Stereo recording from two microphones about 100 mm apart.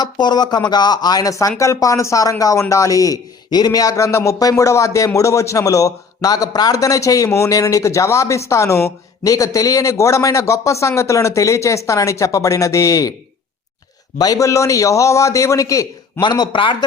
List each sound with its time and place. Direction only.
0.0 s a man's voice: 45° left (ahead or behind)
14.2 s a man's voice: 35° left (ahead or behind)
16.2 s a man's voice: 50° left (ahead or behind)